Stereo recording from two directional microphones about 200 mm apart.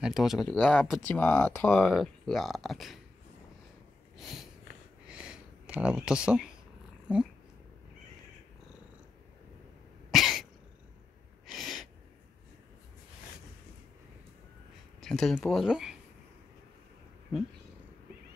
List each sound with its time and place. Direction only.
0.0 s speech: centre (ahead or behind)
4.2 s snort: centre (ahead or behind)
5.0 s a sound: 5° right (ahead or behind)
10.1 s cough: centre (ahead or behind)
11.5 s sneeze: centre (ahead or behind)
15.0 s speech: centre (ahead or behind)